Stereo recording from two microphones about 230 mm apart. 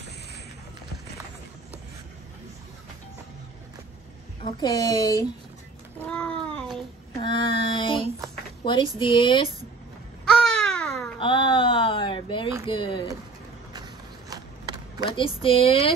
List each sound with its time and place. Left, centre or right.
4.4 s a child's voice: centre
5.9 s a sound: centre
7.2 s child singing: left
8.6 s speech: left
10.2 s babbling: centre
11.1 s a sound: left
12.6 s speech: left
14.3 s a sound: centre
15.0 s speech: left